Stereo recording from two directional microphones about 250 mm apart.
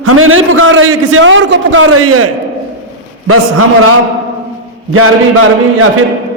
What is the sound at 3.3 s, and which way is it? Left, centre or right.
Speech, right.